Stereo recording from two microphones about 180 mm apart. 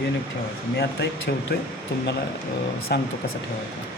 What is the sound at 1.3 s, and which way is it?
Speech, 65° left (ahead or behind).